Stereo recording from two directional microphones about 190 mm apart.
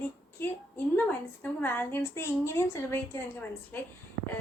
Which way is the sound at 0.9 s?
10° left (ahead or behind).